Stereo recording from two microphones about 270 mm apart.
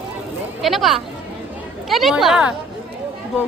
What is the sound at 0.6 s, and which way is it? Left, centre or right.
A woman's voice, centre.